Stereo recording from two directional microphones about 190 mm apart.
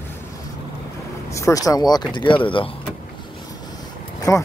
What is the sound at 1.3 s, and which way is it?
Speech, 15° left (ahead or behind).